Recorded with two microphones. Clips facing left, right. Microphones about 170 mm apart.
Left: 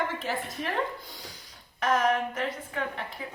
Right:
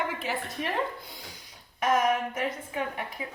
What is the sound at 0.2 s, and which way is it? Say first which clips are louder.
Speech: even; 5° right (ahead or behind).